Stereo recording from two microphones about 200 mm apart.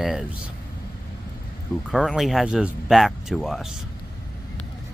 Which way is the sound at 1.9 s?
Centre (ahead or behind).